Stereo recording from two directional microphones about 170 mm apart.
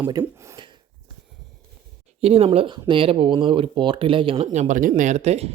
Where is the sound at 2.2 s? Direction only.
35° right (ahead or behind).